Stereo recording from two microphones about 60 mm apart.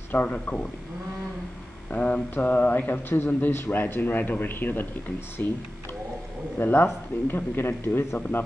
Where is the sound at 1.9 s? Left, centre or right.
Left.